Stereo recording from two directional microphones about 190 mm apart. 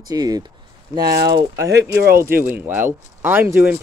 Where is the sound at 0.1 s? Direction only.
20° right (ahead or behind).